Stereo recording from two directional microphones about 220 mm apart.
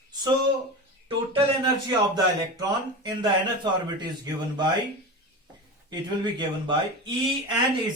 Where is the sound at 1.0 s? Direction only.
25° right (ahead or behind).